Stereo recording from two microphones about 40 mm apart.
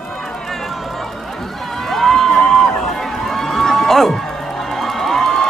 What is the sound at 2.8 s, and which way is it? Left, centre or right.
Run, centre.